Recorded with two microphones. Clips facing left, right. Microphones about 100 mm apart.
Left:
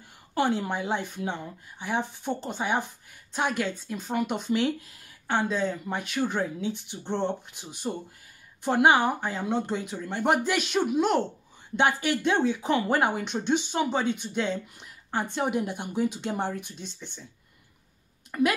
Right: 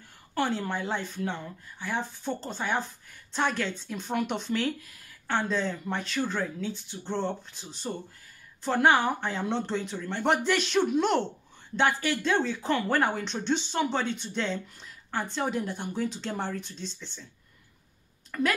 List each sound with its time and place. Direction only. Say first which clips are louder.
0.3 s speech: left 3 dB; 15° left (ahead or behind)
4.5 s speech: left 3 dB; 20° left (ahead or behind)
18.3 s speech: left 4 dB; 20° left (ahead or behind)